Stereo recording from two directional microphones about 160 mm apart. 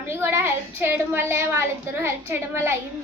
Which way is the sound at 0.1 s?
15° right (ahead or behind).